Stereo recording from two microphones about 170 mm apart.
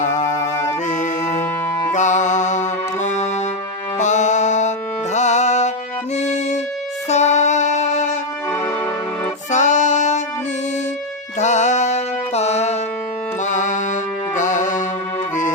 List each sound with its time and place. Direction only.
0.9 s music: 45° left (ahead or behind)
6.1 s violin: 40° left (ahead or behind)
7.1 s music: 45° left (ahead or behind)
8.4 s music: 15° left (ahead or behind)
9.5 s music: 45° left (ahead or behind)
11.3 s music: 45° left (ahead or behind)